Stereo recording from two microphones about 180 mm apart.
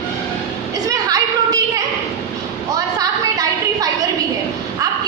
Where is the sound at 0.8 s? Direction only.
20° right (ahead or behind).